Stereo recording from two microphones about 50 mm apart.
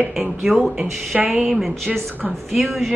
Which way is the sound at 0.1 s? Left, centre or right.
Centre.